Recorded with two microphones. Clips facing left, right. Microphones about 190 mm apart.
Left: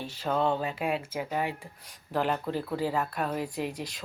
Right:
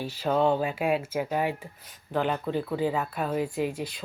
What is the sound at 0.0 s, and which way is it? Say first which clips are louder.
Speech: right 4 dB; 5° right (ahead or behind).